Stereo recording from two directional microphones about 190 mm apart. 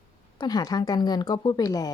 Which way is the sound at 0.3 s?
20° left (ahead or behind).